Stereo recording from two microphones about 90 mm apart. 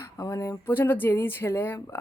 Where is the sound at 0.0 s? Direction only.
35° left (ahead or behind).